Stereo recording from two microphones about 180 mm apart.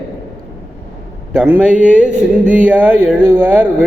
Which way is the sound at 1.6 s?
5° right (ahead or behind).